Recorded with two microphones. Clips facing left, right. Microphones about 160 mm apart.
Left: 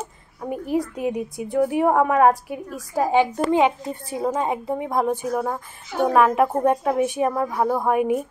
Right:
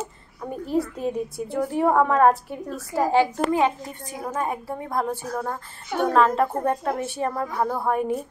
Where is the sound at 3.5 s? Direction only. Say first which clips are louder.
Left 3 dB; 25° left (ahead or behind).